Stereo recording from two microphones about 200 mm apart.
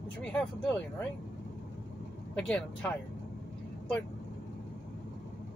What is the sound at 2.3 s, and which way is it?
Speech, 5° left (ahead or behind).